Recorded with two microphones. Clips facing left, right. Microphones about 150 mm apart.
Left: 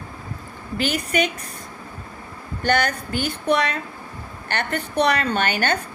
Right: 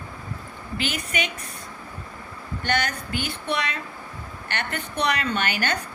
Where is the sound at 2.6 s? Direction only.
40° left (ahead or behind).